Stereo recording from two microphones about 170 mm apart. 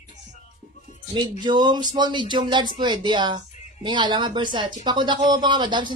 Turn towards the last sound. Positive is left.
turn(degrees=-25)  # may be behind; listen again after turning